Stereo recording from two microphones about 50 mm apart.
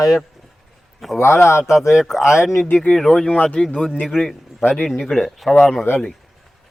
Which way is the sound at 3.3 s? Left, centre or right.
Left.